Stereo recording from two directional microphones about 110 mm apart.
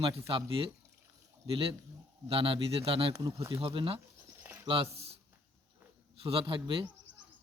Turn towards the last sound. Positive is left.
turn(degrees=-50)  # may be behind; listen again after turning